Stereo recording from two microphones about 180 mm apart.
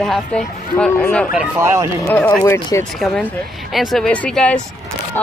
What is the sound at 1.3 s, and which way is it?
Speech, 15° right (ahead or behind).